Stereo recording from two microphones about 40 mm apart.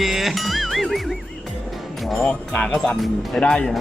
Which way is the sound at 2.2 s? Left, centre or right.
Left.